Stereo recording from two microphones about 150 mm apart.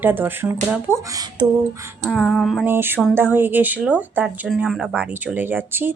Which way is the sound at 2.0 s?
Centre (ahead or behind).